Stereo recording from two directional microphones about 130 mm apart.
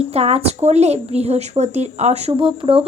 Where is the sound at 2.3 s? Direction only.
40° right (ahead or behind).